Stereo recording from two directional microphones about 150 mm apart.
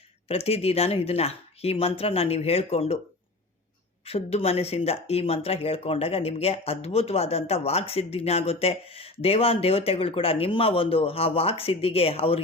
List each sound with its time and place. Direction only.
0.3 s speech: 40° left (ahead or behind)
4.0 s speech: 40° left (ahead or behind)